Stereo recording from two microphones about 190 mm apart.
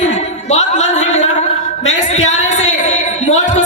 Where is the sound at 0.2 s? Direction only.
35° left (ahead or behind).